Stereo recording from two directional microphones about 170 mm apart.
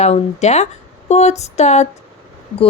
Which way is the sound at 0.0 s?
40° left (ahead or behind).